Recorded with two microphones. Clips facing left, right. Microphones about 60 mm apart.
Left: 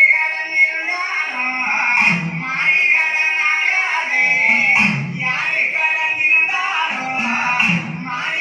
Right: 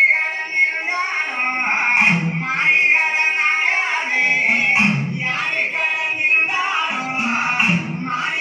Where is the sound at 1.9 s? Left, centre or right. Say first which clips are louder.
Even; centre.